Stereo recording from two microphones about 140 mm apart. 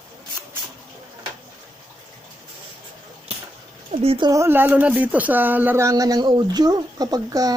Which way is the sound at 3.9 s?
45° right (ahead or behind).